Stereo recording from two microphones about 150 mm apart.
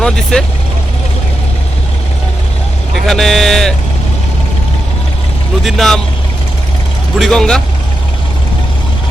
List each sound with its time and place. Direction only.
0.0 s speech: 5° left (ahead or behind)
2.9 s speech: centre (ahead or behind)
5.6 s speech: centre (ahead or behind)
7.2 s speech: 5° left (ahead or behind)